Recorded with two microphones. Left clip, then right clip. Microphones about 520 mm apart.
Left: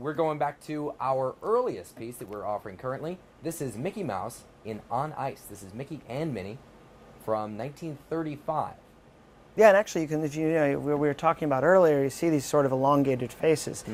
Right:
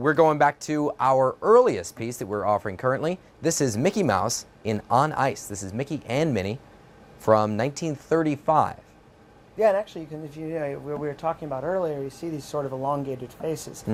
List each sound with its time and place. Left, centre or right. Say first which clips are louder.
0.0 s speech: right 9 dB; right
9.6 s speech: left 3 dB; left